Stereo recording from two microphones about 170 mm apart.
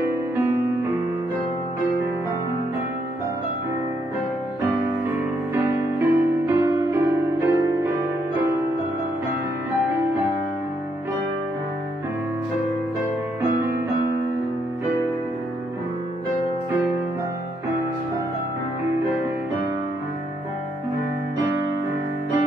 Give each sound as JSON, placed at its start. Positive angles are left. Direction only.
{"t": 5.5, "sound": "music", "side_deg": -15}